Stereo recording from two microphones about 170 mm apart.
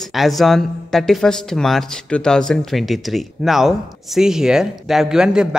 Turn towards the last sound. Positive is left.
turn(degrees=-5)  # may be behind; listen again after turning